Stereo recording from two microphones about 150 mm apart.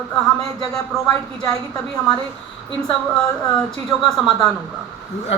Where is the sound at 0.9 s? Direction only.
Centre (ahead or behind).